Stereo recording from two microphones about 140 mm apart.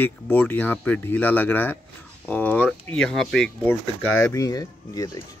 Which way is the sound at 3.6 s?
15° left (ahead or behind).